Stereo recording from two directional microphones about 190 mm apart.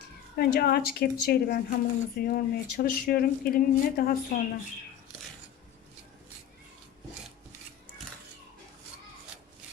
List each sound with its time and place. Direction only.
0.3 s speech: 55° left (ahead or behind)